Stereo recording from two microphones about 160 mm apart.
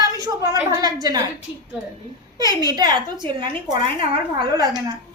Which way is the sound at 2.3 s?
25° right (ahead or behind).